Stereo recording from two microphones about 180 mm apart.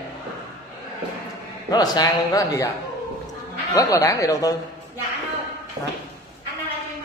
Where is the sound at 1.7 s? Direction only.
20° left (ahead or behind).